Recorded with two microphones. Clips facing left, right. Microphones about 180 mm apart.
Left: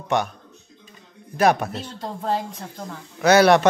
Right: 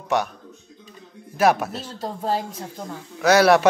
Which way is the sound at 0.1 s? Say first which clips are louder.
Even; 5° right (ahead or behind).